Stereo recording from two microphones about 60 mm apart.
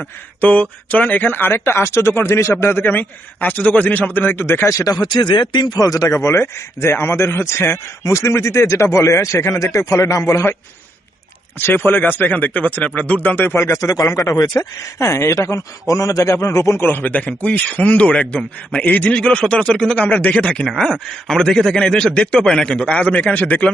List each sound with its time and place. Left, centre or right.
0.4 s a man's voice: left
2.8 s speech: left
5.1 s speech: left
6.1 s a man's voice: left
8.0 s a man's voice: left
11.6 s a man's voice: left
13.8 s speech: left
14.9 s a man's voice: left
16.8 s speech: left; by 20.0 s centre
20.0 s a man's voice: left